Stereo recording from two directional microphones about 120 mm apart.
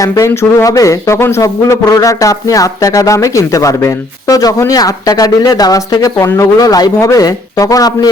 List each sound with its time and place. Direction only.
0.0 s speech: 25° left (ahead or behind)